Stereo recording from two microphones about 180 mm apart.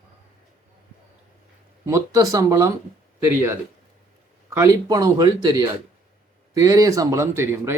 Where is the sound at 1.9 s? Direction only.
20° right (ahead or behind).